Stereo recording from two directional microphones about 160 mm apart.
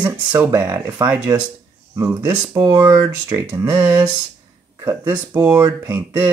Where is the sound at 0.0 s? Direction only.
10° right (ahead or behind).